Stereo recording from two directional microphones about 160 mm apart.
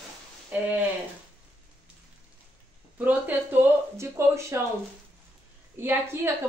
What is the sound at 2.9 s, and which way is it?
A woman's voice, 10° right (ahead or behind).